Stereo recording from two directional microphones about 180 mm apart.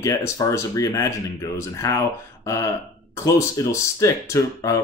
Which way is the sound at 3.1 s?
15° left (ahead or behind).